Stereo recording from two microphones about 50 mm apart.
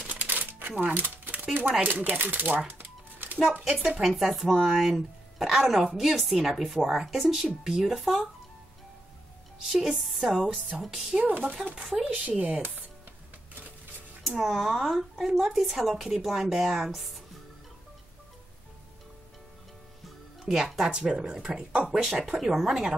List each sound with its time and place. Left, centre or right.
0.0 s crumpling: right
0.8 s a sound: right
1.8 s speech: right
2.8 s music: right
3.9 s speech: centre
9.6 s speech: centre
11.2 s speech: right
12.0 s speech: right
14.2 s speech: centre
20.4 s speech: centre
22.0 s speech: centre